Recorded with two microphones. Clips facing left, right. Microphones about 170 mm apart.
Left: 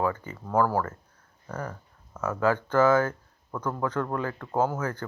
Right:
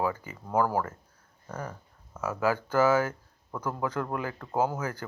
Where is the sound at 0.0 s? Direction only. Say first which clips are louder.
Left 2 dB; 10° right (ahead or behind).